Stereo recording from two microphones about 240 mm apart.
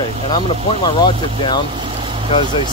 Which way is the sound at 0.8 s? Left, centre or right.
Centre.